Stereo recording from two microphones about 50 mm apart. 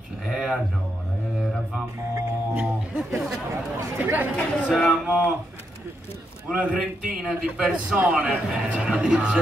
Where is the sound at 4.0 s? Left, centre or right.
Right.